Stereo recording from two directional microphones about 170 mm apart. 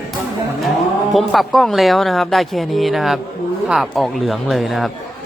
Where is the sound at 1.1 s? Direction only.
Centre (ahead or behind).